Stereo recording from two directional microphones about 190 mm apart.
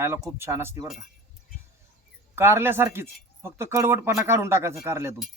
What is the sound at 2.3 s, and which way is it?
Speech, 10° right (ahead or behind).